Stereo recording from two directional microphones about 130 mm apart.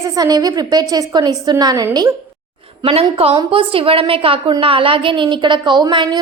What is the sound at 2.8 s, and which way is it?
A woman's voice, 50° right (ahead or behind).